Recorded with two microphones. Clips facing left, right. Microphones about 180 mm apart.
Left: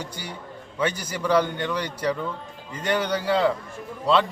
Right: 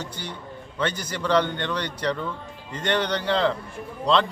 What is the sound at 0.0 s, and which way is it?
A man's voice, 10° left (ahead or behind).